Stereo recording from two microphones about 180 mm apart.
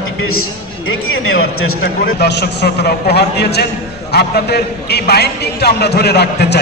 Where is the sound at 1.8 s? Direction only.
70° left (ahead or behind).